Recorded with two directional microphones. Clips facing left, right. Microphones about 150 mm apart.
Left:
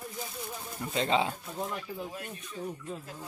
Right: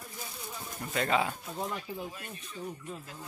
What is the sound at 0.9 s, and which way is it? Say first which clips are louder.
Speech: left 1 dB; 25° left (ahead or behind).